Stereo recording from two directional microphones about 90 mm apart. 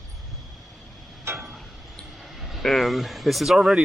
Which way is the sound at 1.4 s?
5° right (ahead or behind).